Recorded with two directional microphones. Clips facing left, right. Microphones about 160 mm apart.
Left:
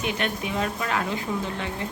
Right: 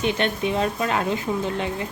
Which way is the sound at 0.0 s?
25° right (ahead or behind).